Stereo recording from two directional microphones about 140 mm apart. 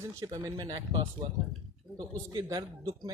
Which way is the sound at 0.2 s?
25° right (ahead or behind).